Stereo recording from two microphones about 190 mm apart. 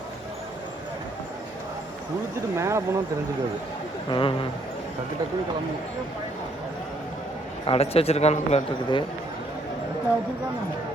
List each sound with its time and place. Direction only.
2.6 s speech: 15° right (ahead or behind)
4.1 s speech: 25° left (ahead or behind)
7.7 s speech: 30° left (ahead or behind)